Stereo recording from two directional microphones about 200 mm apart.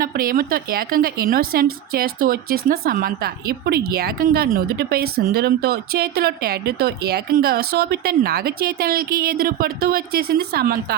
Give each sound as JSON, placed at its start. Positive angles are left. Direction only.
{"t": 0.0, "sound": "speech", "side_deg": -45}